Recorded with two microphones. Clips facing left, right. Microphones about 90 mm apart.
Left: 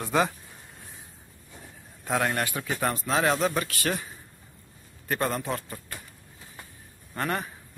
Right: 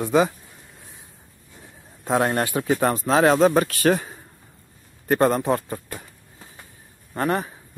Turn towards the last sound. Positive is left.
turn(degrees=-25)  # may be behind; listen again after turning